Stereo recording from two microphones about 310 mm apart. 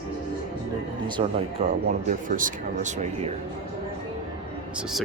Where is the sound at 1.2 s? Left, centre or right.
Centre.